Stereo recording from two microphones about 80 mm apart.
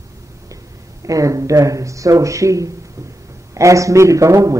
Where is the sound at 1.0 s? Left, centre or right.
Right.